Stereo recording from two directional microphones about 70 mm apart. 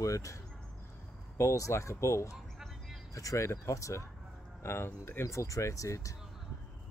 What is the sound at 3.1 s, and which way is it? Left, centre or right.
Speech, left.